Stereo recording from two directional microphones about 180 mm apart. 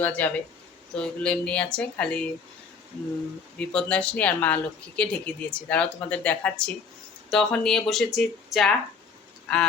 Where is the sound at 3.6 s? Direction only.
5° left (ahead or behind).